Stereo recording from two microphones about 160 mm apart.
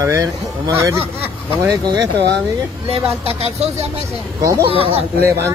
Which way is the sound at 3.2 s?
40° right (ahead or behind).